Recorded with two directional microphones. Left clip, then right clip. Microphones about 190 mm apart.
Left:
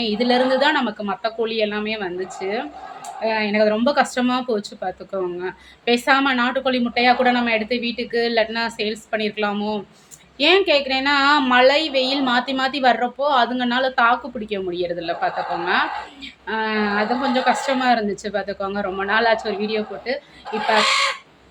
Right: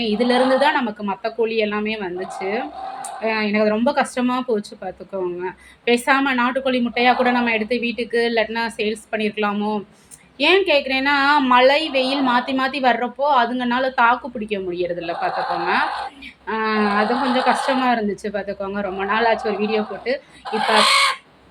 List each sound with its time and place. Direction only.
0.0 s speech: centre (ahead or behind)
3.2 s speech: 5° right (ahead or behind)
20.5 s speech: 40° right (ahead or behind)